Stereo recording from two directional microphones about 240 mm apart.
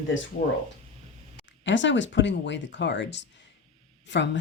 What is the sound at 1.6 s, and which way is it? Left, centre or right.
Speech, left.